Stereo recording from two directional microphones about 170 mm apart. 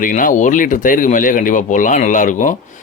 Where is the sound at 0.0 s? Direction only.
50° left (ahead or behind).